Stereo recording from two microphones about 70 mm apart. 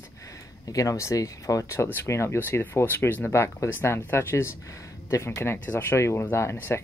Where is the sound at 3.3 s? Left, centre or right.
Left.